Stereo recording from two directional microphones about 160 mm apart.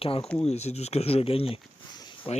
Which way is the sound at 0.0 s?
35° left (ahead or behind).